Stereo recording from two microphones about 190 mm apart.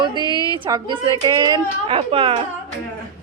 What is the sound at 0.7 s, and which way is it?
A woman's voice, 25° right (ahead or behind).